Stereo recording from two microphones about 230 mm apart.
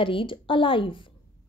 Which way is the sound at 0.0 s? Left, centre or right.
Left.